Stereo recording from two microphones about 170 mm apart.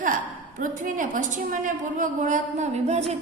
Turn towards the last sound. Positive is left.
turn(degrees=-40)  # may be behind; listen again after turning